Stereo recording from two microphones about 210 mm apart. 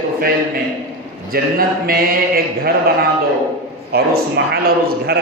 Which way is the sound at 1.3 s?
45° right (ahead or behind).